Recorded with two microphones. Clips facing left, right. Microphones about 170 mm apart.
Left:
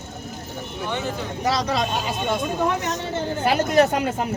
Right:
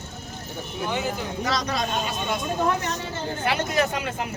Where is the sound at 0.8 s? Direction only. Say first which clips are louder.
Even; 5° right (ahead or behind).